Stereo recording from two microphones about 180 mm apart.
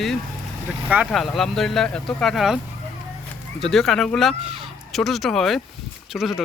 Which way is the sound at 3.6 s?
Centre (ahead or behind).